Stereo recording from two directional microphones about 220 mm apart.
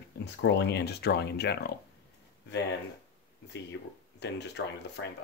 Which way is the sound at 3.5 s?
50° left (ahead or behind).